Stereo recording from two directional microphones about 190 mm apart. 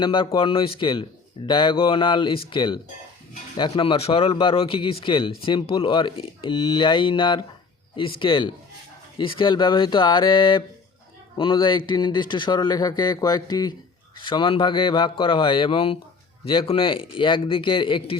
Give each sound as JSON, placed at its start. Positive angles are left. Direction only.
{"t": 0.0, "sound": "speech", "side_deg": 25}